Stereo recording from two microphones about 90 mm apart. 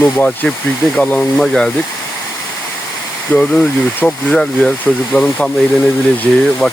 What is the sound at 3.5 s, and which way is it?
Speech, 5° left (ahead or behind).